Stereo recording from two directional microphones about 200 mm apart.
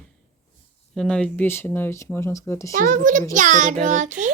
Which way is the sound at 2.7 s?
40° right (ahead or behind).